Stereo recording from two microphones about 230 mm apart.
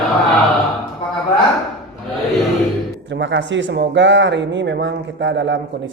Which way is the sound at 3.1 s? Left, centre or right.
Right.